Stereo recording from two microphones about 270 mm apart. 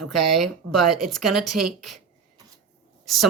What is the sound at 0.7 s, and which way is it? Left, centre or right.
Speech, right.